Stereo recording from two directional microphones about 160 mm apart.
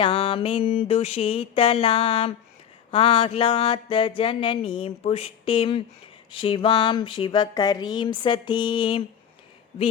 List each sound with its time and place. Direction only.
0.0 s mantra: 35° left (ahead or behind)